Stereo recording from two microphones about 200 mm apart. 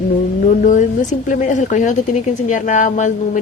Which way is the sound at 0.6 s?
40° left (ahead or behind).